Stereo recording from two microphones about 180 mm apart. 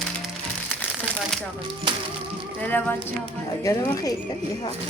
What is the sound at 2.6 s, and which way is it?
Speech, 10° left (ahead or behind).